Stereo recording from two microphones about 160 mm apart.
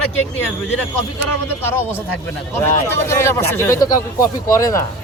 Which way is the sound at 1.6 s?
15° left (ahead or behind).